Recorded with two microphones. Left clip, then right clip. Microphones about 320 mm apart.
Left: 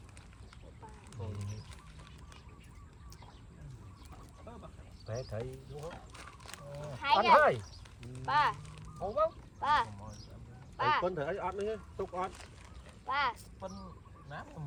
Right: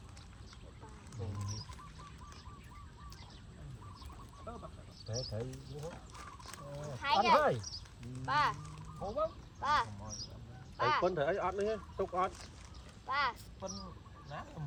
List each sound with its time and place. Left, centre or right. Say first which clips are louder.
5.4 s speech: left 2 dB; left
11.0 s speech: right 2 dB; centre
13.1 s a sound: left 2 dB; left
13.6 s speech: right 1 dB; centre